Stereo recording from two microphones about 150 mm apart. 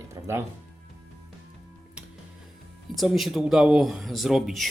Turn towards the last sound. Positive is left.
turn(degrees=0)  # may be behind; listen again after turning